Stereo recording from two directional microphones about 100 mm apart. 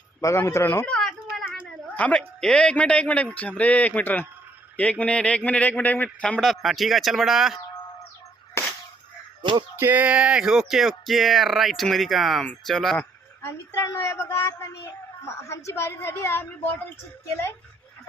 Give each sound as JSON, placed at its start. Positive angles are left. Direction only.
{"t": 0.2, "sound": "speech", "side_deg": 30}
{"t": 0.9, "sound": "a sound", "side_deg": 5}
{"t": 2.0, "sound": "speech", "side_deg": 10}
{"t": 6.4, "sound": "speech", "side_deg": 0}
{"t": 9.4, "sound": "music", "side_deg": -50}
{"t": 9.7, "sound": "speech", "side_deg": -20}
{"t": 13.0, "sound": "a woman's voice", "side_deg": 25}